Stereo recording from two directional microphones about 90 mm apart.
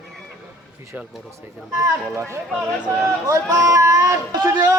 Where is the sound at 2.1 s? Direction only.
30° right (ahead or behind).